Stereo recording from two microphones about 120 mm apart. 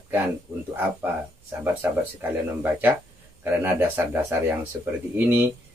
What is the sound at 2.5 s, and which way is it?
Speech, 15° right (ahead or behind).